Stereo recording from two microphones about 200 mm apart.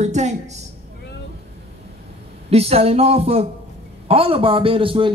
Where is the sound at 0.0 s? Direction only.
35° right (ahead or behind).